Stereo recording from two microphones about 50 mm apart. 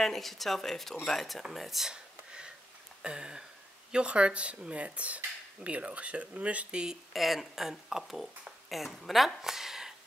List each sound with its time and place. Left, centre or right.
0.0 s speech: centre
1.9 s a sound: centre
3.0 s speech: centre
7.1 s speech: centre